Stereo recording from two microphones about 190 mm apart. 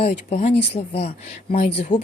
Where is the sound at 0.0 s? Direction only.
35° left (ahead or behind).